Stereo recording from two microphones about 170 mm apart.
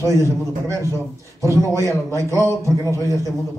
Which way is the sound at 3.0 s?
20° left (ahead or behind).